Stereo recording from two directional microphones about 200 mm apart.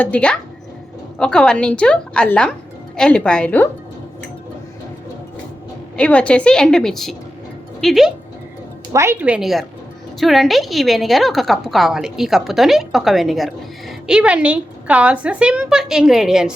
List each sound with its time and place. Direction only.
0.0 s a woman's voice: 5° left (ahead or behind)
6.0 s a woman's voice: 5° left (ahead or behind)
8.9 s a woman's voice: 10° right (ahead or behind)